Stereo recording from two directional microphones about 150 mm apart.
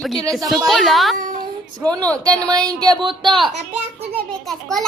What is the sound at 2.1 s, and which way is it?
Speech, 25° right (ahead or behind).